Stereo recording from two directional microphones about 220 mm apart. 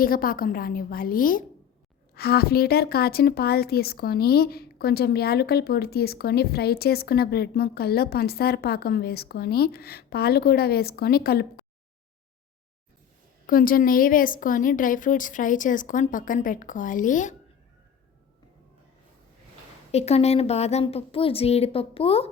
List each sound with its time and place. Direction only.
0.0 s a woman's voice: 40° left (ahead or behind)
13.5 s a woman's voice: 40° left (ahead or behind)
19.9 s speech: 30° left (ahead or behind)